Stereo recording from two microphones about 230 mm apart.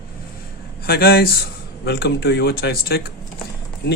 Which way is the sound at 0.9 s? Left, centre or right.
Left.